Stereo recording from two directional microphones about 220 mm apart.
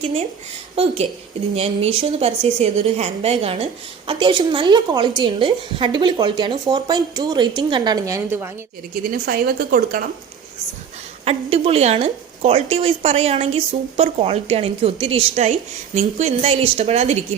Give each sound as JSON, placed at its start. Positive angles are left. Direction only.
{"t": 1.5, "sound": "a woman's voice", "side_deg": -25}
{"t": 9.0, "sound": "speech", "side_deg": -45}
{"t": 11.3, "sound": "a woman's voice", "side_deg": -25}